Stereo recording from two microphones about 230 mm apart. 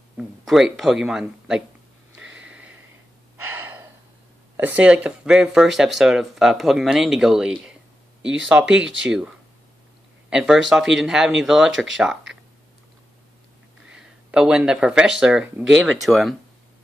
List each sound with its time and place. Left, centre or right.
0.2 s speech: centre
2.1 s a sound: right
2.4 s a sound: centre
3.5 s gasp: centre
4.6 s speech: centre
10.3 s speech: centre
13.9 s speech: centre